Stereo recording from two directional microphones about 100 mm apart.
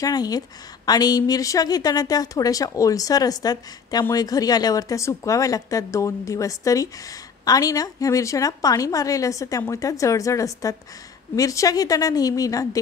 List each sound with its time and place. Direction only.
0.0 s a woman's voice: 40° left (ahead or behind)